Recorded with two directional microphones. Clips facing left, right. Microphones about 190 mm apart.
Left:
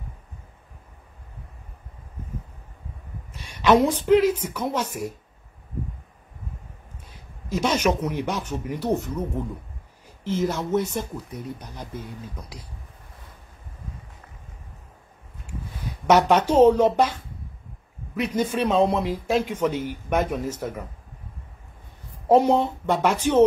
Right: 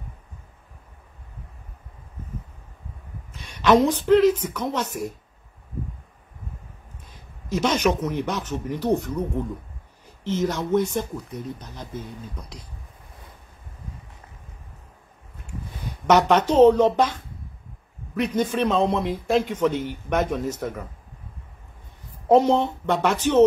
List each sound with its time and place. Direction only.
3.6 s speech: 10° left (ahead or behind)
7.1 s speech: 10° left (ahead or behind)
10.2 s speech: 5° left (ahead or behind)
16.1 s speech: 10° left (ahead or behind)
22.3 s speech: 10° left (ahead or behind)